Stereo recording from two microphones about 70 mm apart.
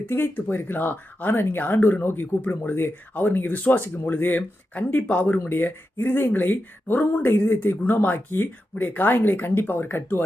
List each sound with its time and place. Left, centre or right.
0.0 s speech: left